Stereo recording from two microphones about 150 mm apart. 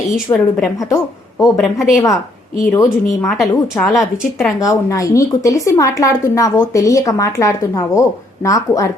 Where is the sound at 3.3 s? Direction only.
5° left (ahead or behind).